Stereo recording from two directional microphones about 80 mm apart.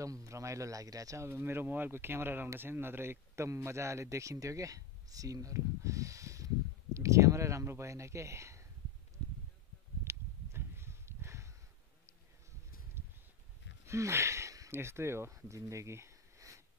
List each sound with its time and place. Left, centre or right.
0.0 s speech: right
10.0 s a sound: right
13.8 s speech: right